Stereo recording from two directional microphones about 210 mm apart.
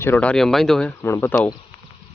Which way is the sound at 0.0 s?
10° left (ahead or behind).